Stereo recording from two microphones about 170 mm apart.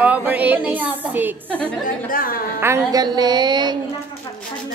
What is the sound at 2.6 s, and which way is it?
A woman's voice, 20° right (ahead or behind).